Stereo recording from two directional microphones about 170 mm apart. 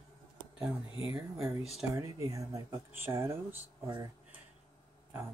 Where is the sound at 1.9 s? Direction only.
20° right (ahead or behind).